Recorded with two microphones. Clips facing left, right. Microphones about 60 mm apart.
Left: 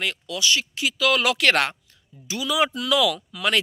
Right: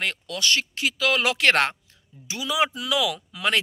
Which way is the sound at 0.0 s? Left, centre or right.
Right.